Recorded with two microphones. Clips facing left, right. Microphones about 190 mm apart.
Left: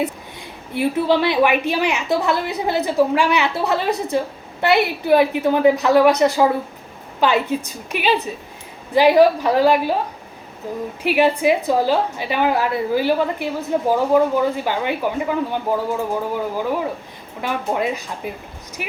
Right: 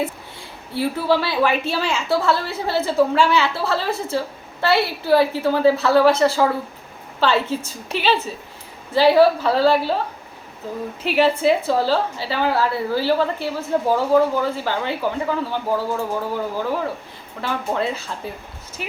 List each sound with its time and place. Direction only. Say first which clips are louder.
0.7 s a woman's voice: left 2 dB; 20° left (ahead or behind)
11.0 s a woman's voice: left 1 dB; 15° left (ahead or behind)